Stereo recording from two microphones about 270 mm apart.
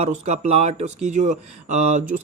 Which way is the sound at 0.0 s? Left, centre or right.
Right.